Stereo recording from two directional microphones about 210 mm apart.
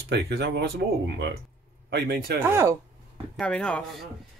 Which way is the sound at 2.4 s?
15° right (ahead or behind).